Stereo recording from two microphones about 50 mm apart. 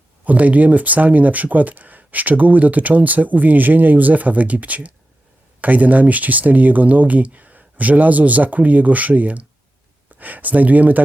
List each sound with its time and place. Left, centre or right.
0.3 s speech: right